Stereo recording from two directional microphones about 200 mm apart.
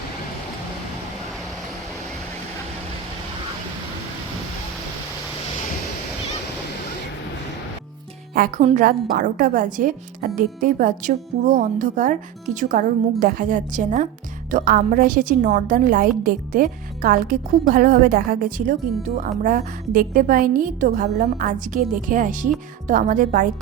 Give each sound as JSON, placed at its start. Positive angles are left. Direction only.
{"t": 8.4, "sound": "a woman's voice", "side_deg": -40}